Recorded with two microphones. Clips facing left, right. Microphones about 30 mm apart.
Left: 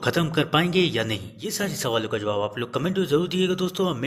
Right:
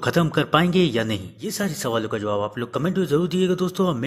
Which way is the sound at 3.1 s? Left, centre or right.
Left.